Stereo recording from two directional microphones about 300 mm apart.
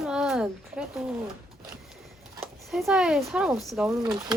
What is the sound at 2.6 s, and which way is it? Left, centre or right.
Speech, centre.